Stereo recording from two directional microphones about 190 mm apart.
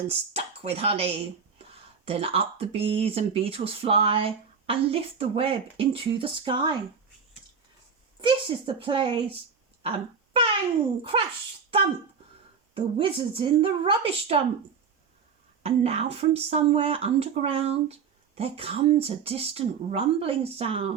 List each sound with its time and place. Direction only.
0.1 s speech: 30° right (ahead or behind)
8.2 s a woman's voice: 25° right (ahead or behind)
9.8 s wail: 30° right (ahead or behind)
11.1 s speech: 30° right (ahead or behind)
12.7 s speech: 25° right (ahead or behind)
15.6 s speech: 30° right (ahead or behind)